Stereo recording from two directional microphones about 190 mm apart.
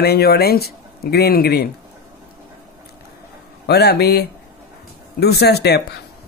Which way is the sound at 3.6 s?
55° left (ahead or behind).